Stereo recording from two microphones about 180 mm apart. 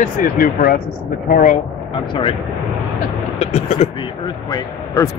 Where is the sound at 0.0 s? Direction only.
50° left (ahead or behind).